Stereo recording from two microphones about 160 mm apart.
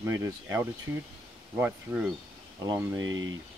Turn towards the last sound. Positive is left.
turn(degrees=-20)  # may be behind; listen again after turning